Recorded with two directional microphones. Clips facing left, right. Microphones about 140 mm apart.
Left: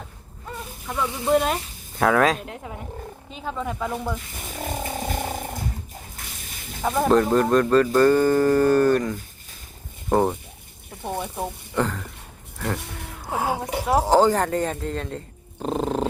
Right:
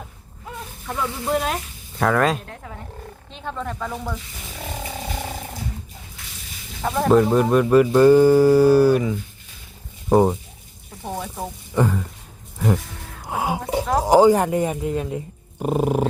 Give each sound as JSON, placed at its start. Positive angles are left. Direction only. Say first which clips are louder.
{"t": 1.2, "sound": "speech", "louder": "left 4 dB", "side_deg": 0}
{"t": 2.5, "sound": "speech", "louder": "left 2 dB", "side_deg": 15}
{"t": 3.2, "sound": "speech", "louder": "even", "side_deg": 5}
{"t": 4.4, "sound": "wild animals", "louder": "left 3 dB", "side_deg": 45}
{"t": 6.2, "sound": "a sound", "louder": "left 3 dB", "side_deg": 50}
{"t": 6.8, "sound": "speech", "louder": "right 2 dB", "side_deg": 0}
{"t": 11.7, "sound": "speech", "louder": "right 5 dB", "side_deg": -10}
{"t": 12.5, "sound": "a sound", "louder": "right 6 dB", "side_deg": -10}
{"t": 13.2, "sound": "music", "louder": "right 1 dB", "side_deg": -15}
{"t": 14.0, "sound": "speech", "louder": "right 5 dB", "side_deg": -10}